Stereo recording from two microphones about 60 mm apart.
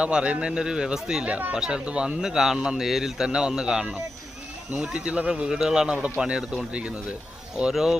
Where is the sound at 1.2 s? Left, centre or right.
Right.